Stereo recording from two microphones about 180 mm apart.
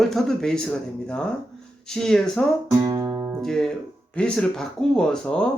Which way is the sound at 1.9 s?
5° left (ahead or behind).